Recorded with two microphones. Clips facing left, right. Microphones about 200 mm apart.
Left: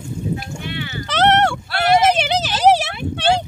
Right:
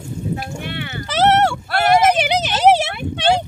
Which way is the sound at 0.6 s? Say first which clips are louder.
Even; 55° right (ahead or behind).